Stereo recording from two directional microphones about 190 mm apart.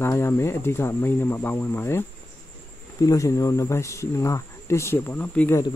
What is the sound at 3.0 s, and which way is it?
Speech, 15° left (ahead or behind).